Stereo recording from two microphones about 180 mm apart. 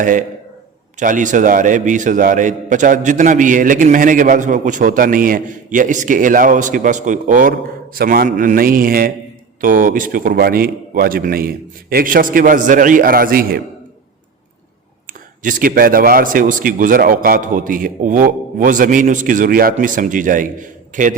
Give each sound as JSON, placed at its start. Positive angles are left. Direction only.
{"t": 0.0, "sound": "a man's voice", "side_deg": -45}
{"t": 15.4, "sound": "a man's voice", "side_deg": -50}